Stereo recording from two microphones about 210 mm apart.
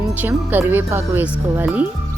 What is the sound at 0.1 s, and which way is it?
Speech, 10° right (ahead or behind).